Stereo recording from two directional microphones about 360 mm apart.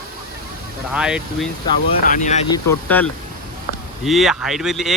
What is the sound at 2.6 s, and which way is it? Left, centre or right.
Speech, centre.